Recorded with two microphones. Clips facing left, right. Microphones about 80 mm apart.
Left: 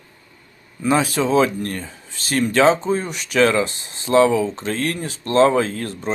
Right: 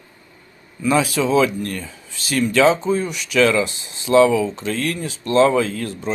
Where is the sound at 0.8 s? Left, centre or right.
Left.